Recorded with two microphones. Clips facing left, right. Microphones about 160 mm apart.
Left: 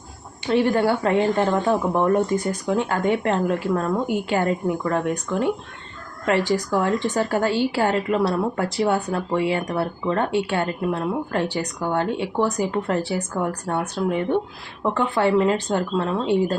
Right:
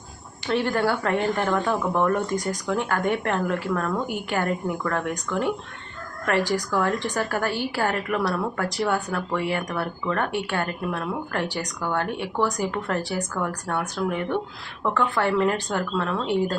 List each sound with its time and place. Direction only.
0.4 s a woman's voice: 20° left (ahead or behind)